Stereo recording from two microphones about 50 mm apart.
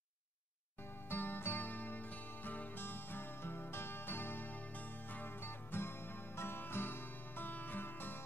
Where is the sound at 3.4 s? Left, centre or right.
Left.